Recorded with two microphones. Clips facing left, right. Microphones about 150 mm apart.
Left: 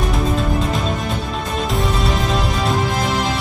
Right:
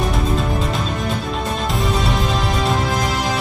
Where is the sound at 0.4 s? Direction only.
Centre (ahead or behind).